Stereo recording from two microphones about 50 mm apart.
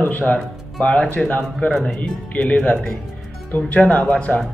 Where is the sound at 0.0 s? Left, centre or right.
Left.